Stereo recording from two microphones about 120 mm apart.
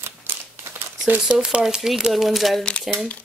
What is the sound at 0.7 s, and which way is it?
Speech, 15° right (ahead or behind).